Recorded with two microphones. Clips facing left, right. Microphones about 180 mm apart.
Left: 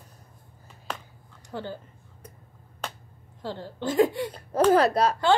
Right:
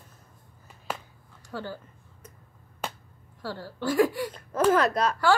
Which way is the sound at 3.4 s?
20° left (ahead or behind).